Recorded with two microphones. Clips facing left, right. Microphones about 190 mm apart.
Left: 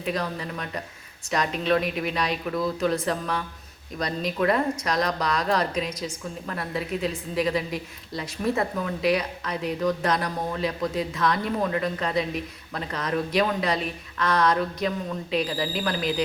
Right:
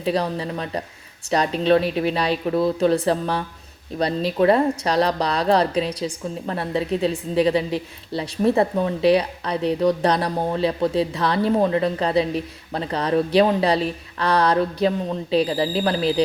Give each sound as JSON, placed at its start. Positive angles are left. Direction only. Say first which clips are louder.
{"t": 0.0, "sound": "speech", "louder": "right 6 dB", "side_deg": -30}